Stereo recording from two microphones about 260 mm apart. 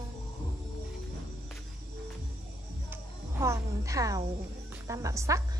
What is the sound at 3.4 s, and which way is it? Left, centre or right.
A woman's voice, centre.